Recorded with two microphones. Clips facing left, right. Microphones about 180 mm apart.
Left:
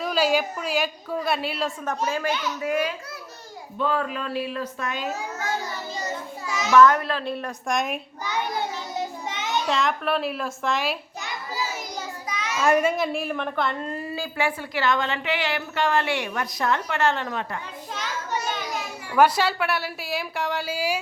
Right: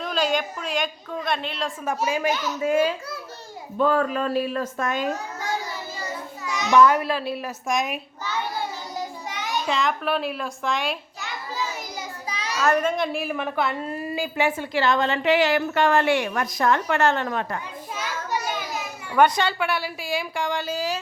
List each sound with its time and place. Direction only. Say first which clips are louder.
0.0 s a woman's voice: left 2 dB; 5° left (ahead or behind)
1.8 s a woman's voice: right 6 dB; 10° right (ahead or behind)
2.6 s a child's voice: right 4 dB; 25° right (ahead or behind)
3.8 s speech: right 5 dB; 45° right (ahead or behind)
6.5 s children playing: right 1 dB; centre (ahead or behind)
6.7 s a woman's voice: even; 10° right (ahead or behind)
8.2 s a sound: left 1 dB; 20° left (ahead or behind)
9.6 s a woman's voice: right 1 dB; centre (ahead or behind)
11.2 s a sound: even; 10° left (ahead or behind)
12.3 s a sound: left 1 dB; 30° right (ahead or behind)
12.5 s a woman's voice: left 1 dB; 10° left (ahead or behind); by 17.6 s 50° right (ahead or behind)
17.9 s children playing: right 1 dB; 10° right (ahead or behind)
19.1 s a woman's voice: even; 5° left (ahead or behind)